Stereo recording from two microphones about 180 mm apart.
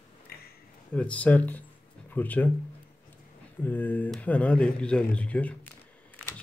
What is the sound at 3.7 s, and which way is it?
Speech, 10° left (ahead or behind).